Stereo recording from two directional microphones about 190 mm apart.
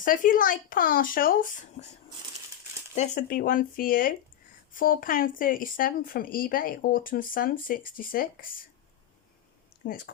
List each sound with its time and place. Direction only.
0.0 s speech: 45° left (ahead or behind)
2.9 s speech: 40° left (ahead or behind)
9.8 s a woman's voice: 50° left (ahead or behind)